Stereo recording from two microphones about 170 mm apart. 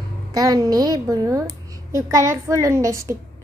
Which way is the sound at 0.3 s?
20° right (ahead or behind).